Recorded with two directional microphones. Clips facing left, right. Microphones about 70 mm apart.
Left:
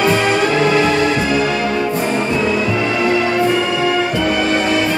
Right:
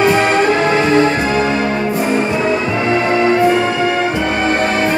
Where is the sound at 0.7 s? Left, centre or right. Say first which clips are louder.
Right 2 dB; right.